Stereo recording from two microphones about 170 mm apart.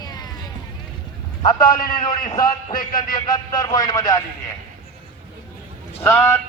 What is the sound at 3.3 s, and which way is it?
Speech, 25° left (ahead or behind).